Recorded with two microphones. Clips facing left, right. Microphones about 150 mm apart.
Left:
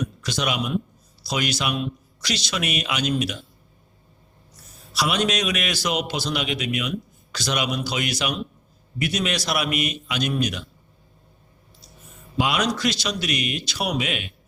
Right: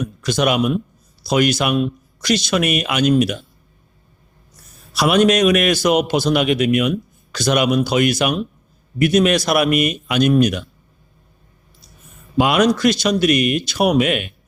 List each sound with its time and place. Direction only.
0.2 s a man's voice: 50° right (ahead or behind)
4.9 s a man's voice: 55° right (ahead or behind)
12.4 s a man's voice: 50° right (ahead or behind)